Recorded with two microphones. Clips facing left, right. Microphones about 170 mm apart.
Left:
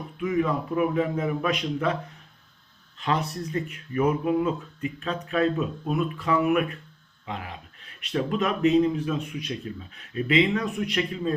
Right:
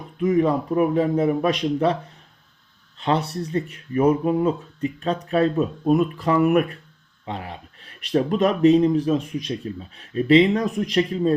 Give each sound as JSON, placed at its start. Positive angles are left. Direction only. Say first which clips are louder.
{"t": 0.2, "sound": "speech", "louder": "right 6 dB", "side_deg": -35}
{"t": 3.0, "sound": "speech", "louder": "right 4 dB", "side_deg": -30}
{"t": 7.3, "sound": "speech", "louder": "right 4 dB", "side_deg": -30}